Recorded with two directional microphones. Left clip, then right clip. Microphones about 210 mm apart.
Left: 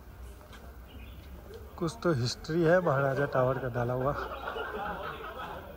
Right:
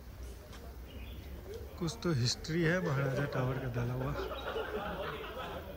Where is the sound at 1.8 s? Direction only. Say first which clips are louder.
Left 7 dB; 5° right (ahead or behind).